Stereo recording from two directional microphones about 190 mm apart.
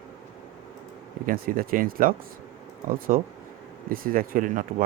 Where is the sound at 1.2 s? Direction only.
50° right (ahead or behind).